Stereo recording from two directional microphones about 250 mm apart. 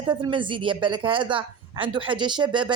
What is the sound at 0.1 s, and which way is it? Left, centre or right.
A woman's voice, centre.